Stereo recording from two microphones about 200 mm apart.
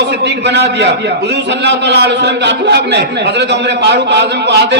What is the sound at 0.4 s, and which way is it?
A man's voice, 60° right (ahead or behind).